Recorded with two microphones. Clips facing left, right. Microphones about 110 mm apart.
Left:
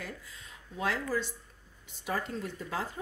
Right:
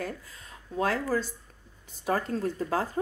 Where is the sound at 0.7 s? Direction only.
40° right (ahead or behind).